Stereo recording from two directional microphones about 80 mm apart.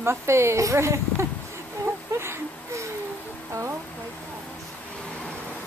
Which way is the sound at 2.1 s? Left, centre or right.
Right.